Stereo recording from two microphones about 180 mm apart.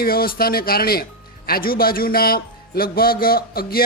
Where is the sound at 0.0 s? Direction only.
55° left (ahead or behind).